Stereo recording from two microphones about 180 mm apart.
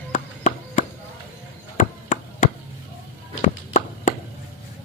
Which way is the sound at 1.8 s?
45° left (ahead or behind).